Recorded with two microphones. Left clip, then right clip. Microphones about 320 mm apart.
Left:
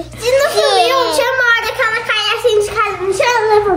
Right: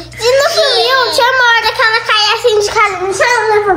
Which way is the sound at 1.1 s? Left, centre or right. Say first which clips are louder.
Right 4 dB; centre.